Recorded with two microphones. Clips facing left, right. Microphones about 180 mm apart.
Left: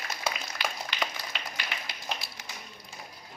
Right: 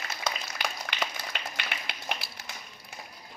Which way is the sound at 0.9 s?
65° right (ahead or behind).